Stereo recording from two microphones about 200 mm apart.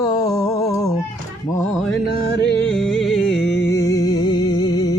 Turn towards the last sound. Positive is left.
turn(degrees=20)  # may be behind; listen again after turning